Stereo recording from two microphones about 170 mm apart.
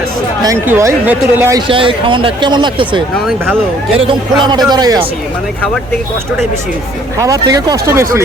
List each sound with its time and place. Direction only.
0.4 s speech: 15° right (ahead or behind)
1.6 s speech: 30° right (ahead or behind)
3.2 s speech: centre (ahead or behind)
3.9 s speech: 30° right (ahead or behind)
7.2 s speech: 20° right (ahead or behind)